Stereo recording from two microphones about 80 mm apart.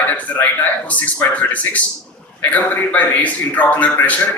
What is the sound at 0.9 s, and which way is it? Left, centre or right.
A man's voice, centre.